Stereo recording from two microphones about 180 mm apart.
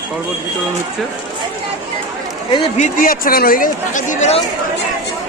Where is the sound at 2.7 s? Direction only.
45° left (ahead or behind).